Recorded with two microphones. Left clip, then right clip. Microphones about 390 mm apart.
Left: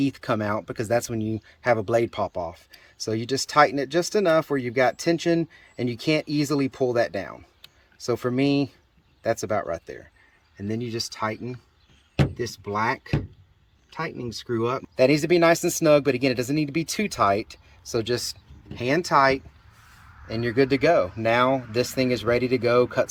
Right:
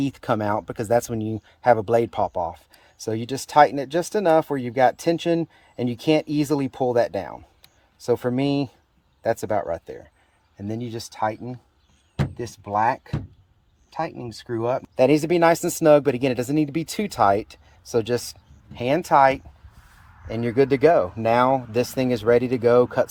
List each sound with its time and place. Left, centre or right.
0.0 s speech: right
14.9 s speech: right